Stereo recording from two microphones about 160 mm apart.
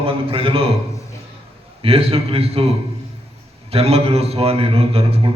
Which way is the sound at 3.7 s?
40° right (ahead or behind).